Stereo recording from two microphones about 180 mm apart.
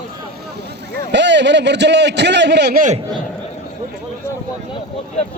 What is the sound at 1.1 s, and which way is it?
A man's voice, 80° right.